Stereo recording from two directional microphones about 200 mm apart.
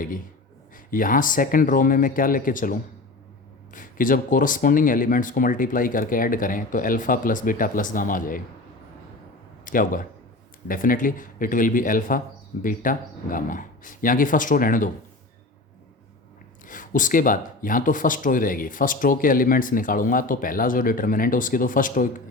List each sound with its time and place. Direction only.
0.9 s speech: 45° left (ahead or behind)
9.6 s speech: 45° left (ahead or behind)
16.6 s speech: 40° left (ahead or behind)